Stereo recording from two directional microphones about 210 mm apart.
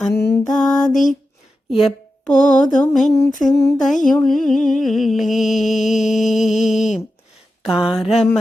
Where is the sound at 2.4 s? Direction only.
35° left (ahead or behind).